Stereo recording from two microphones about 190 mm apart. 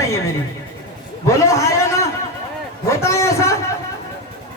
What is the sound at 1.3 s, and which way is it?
A man's voice, 15° left (ahead or behind).